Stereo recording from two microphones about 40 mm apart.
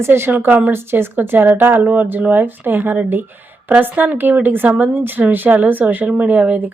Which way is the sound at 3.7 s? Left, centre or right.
Right.